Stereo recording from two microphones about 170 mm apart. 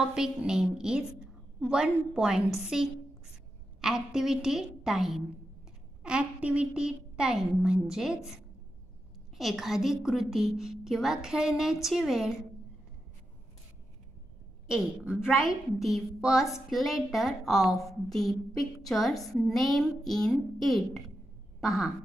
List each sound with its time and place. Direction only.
0.1 s a woman's voice: 5° right (ahead or behind)
9.4 s a woman's voice: centre (ahead or behind)
14.7 s a woman's voice: 5° right (ahead or behind)